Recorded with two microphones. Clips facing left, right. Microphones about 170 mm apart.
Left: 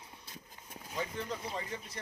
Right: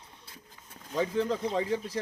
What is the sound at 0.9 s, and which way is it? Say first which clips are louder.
Speech: right 10 dB; 90° right.